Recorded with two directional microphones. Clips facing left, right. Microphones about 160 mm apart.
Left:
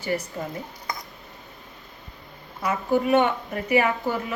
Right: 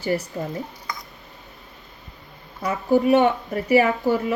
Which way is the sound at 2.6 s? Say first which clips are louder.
Right 4 dB; 35° right (ahead or behind).